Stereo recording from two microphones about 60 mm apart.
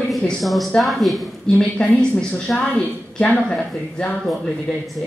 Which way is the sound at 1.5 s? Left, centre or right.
Left.